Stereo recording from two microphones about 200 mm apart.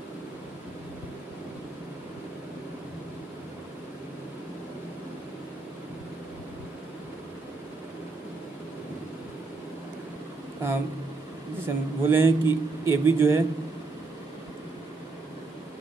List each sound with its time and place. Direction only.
10.6 s a man's voice: 10° right (ahead or behind)